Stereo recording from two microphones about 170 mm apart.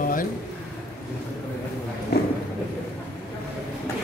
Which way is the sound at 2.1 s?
70° left (ahead or behind).